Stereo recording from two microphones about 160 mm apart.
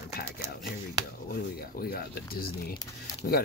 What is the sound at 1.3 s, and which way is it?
Speech, 70° left (ahead or behind).